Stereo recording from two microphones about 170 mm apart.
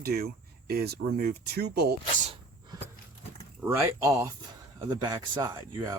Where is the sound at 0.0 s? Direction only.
65° right (ahead or behind).